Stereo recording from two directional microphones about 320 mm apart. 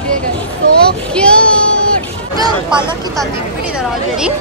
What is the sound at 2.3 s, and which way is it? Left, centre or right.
Speech, centre.